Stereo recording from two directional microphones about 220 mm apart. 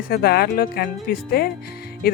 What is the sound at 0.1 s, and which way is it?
A woman's voice, 45° left (ahead or behind).